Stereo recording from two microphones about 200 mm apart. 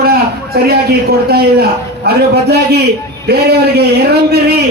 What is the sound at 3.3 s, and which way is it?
Speech, 55° right (ahead or behind).